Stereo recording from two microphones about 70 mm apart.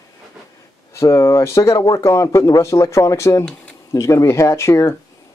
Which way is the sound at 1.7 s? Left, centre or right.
Left.